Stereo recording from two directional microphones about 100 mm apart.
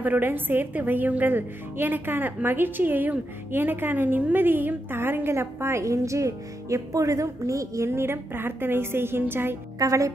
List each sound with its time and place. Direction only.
0.0 s a woman's voice: 20° right (ahead or behind)
9.8 s speech: 35° right (ahead or behind)